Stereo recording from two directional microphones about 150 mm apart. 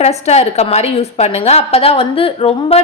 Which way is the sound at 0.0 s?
45° left (ahead or behind).